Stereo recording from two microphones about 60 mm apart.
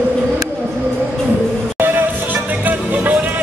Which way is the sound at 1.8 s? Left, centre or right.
Right.